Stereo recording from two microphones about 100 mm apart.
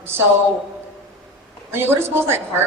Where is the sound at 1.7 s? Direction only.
25° right (ahead or behind).